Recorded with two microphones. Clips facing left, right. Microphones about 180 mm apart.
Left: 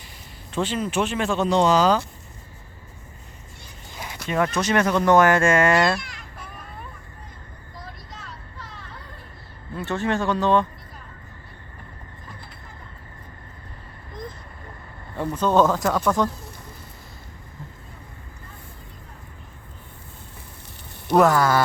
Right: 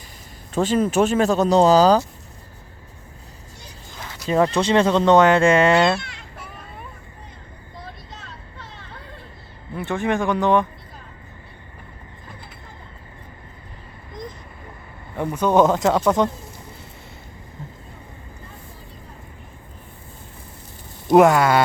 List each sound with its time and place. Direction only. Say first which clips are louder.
0.5 s speech: right 6 dB; 45° right (ahead or behind)
3.9 s a sound: left 1 dB; 10° left (ahead or behind)
4.3 s speech: right 4 dB; 30° right (ahead or behind)
8.5 s a sound: right 1 dB; 25° right (ahead or behind)
9.7 s speech: right 2 dB; 15° right (ahead or behind)
15.1 s speech: right 2 dB; 15° right (ahead or behind)
21.1 s speech: right 4 dB; 20° right (ahead or behind)